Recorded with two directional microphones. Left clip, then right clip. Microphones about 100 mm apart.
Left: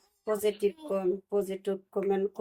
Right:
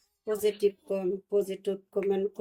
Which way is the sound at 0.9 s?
20° left (ahead or behind).